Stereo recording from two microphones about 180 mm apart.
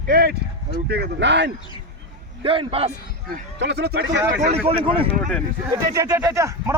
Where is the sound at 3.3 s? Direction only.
65° right (ahead or behind).